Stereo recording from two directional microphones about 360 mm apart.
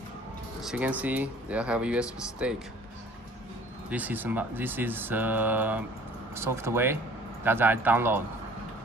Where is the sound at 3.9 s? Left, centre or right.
Centre.